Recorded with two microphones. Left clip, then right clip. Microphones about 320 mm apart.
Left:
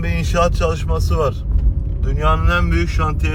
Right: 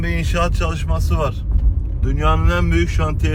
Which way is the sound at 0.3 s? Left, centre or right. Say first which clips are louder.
Left 6 dB; centre.